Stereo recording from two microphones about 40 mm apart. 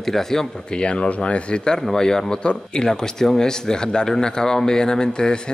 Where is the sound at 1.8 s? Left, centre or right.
Centre.